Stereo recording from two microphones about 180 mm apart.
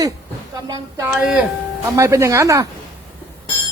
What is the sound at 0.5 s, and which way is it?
Speech, 20° right (ahead or behind).